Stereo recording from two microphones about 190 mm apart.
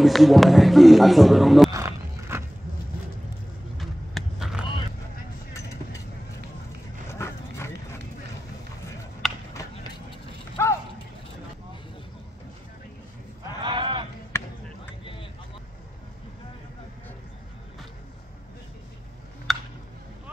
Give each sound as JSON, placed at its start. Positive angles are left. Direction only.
{"t": 0.0, "sound": "a man's voice", "side_deg": 0}
{"t": 1.7, "sound": "walk", "side_deg": -15}
{"t": 3.7, "sound": "vehicle", "side_deg": 0}
{"t": 7.1, "sound": "dog", "side_deg": 15}
{"t": 9.2, "sound": "a sound", "side_deg": 0}
{"t": 10.6, "sound": "mechanisms", "side_deg": 15}
{"t": 13.6, "sound": "a sound", "side_deg": -25}
{"t": 14.3, "sound": "basketball bounce", "side_deg": 15}
{"t": 19.5, "sound": "a sound", "side_deg": 0}